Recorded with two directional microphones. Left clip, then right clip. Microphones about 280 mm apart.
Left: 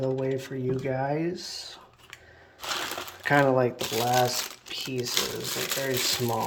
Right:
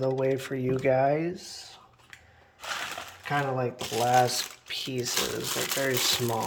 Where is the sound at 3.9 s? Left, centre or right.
Centre.